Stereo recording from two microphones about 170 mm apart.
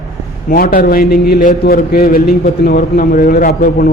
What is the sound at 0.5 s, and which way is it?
A man's voice, 60° left (ahead or behind).